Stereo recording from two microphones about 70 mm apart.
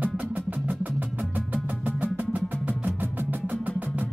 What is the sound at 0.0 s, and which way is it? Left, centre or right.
Music, right.